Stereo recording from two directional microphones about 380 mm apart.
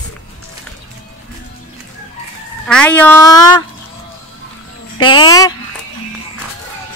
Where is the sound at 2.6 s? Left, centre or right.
Centre.